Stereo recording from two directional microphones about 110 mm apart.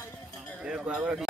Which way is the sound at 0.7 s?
10° right (ahead or behind).